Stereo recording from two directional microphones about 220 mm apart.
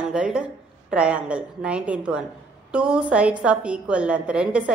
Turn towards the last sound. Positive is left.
turn(degrees=-5)  # may be behind; listen again after turning